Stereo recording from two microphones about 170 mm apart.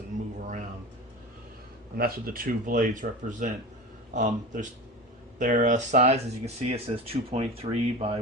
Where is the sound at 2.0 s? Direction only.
60° right (ahead or behind).